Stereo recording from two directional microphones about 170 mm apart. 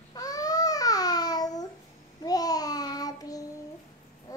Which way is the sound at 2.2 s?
20° left (ahead or behind).